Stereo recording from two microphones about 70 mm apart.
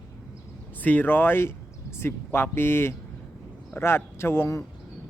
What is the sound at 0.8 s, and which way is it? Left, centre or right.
Speech, left.